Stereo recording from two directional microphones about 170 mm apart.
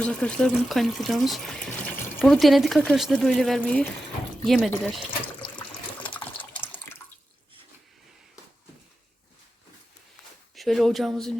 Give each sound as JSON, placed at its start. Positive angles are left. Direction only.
{"t": 0.0, "sound": "speech", "side_deg": 5}
{"t": 5.5, "sound": "water", "side_deg": 30}
{"t": 6.6, "sound": "water", "side_deg": 10}
{"t": 10.5, "sound": "speech", "side_deg": 0}